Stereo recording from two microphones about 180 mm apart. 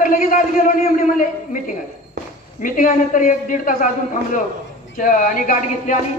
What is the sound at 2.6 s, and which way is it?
A man's voice, 50° left (ahead or behind).